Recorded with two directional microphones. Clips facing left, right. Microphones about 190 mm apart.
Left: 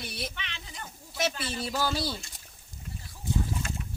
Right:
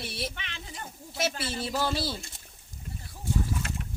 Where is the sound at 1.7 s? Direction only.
Centre (ahead or behind).